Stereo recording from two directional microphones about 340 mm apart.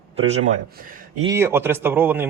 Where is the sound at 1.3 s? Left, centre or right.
Centre.